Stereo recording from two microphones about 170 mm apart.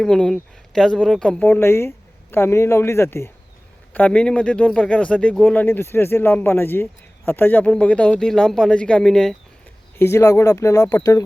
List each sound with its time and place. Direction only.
0.0 s speech: 5° left (ahead or behind)
10.0 s speech: 15° left (ahead or behind)